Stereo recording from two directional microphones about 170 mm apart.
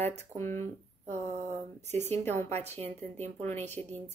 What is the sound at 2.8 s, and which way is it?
Speech, 10° left (ahead or behind).